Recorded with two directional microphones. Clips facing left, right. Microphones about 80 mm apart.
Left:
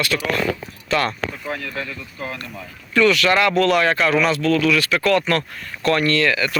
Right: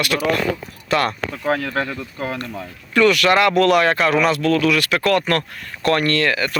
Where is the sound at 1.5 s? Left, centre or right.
Right.